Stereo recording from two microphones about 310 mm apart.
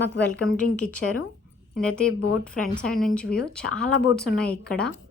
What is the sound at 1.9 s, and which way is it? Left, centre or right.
Speech, centre.